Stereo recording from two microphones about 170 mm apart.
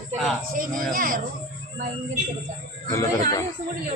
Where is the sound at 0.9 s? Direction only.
55° right (ahead or behind).